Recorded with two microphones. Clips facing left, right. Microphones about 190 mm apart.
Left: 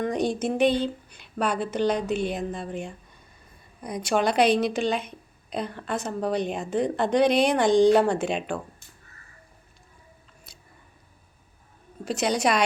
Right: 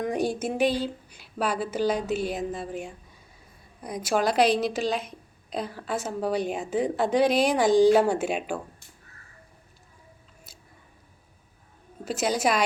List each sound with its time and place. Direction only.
0.0 s a woman's voice: 10° right (ahead or behind)
12.0 s a woman's voice: 5° right (ahead or behind)